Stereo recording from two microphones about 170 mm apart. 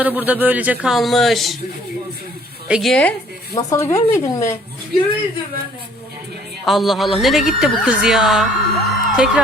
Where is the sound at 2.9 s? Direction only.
10° left (ahead or behind).